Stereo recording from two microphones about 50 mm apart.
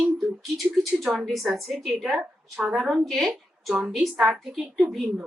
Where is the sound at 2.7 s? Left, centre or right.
Centre.